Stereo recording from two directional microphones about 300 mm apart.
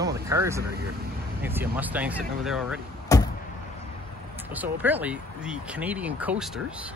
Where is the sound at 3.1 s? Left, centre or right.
Centre.